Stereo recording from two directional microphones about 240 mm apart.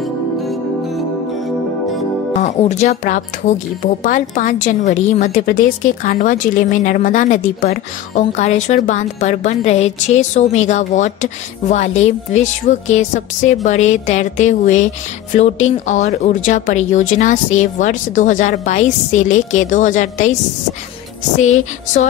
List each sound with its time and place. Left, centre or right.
2.4 s speech: left
21.4 s speech: left